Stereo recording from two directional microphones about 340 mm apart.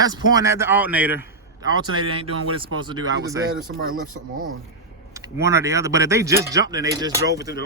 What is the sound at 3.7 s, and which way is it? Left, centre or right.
Speech, right.